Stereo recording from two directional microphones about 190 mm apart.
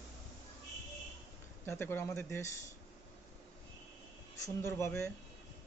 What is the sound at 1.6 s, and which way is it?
Speech, 10° left (ahead or behind).